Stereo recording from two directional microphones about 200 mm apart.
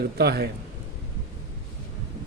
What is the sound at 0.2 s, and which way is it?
Speech, 55° right (ahead or behind).